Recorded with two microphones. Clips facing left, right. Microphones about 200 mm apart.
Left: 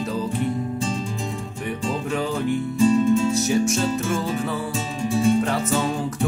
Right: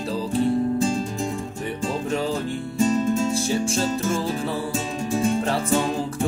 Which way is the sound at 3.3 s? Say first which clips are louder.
Left 2 dB; 30° right (ahead or behind).